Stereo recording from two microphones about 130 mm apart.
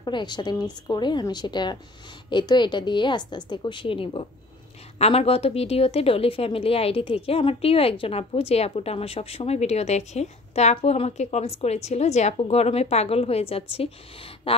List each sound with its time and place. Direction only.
0.0 s a woman's voice: 35° left (ahead or behind)